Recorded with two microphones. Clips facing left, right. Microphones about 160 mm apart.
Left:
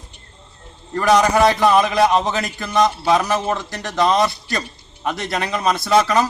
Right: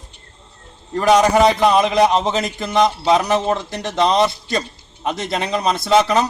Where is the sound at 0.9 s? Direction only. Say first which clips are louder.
Right 2 dB; 20° right (ahead or behind).